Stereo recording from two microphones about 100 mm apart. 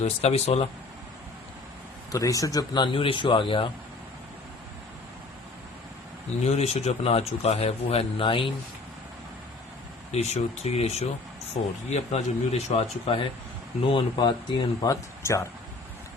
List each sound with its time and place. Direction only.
0.2 s speech: 90° left
2.1 s speech: 35° left (ahead or behind)
2.8 s speech: 60° left (ahead or behind)
6.4 s speech: 90° left; by 8.5 s 60° left (ahead or behind)
10.1 s speech: 90° left; by 13.2 s 75° left (ahead or behind)
13.8 s speech: 55° left (ahead or behind)
14.8 s speech: 30° left (ahead or behind)